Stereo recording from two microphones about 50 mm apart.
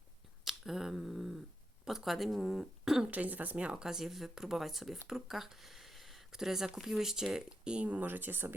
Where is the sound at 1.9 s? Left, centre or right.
Centre.